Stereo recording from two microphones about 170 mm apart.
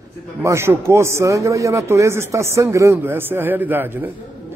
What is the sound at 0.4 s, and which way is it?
A man's voice, 15° right (ahead or behind).